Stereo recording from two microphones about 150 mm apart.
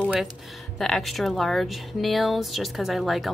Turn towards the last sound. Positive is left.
turn(degrees=0)  # may be behind; listen again after turning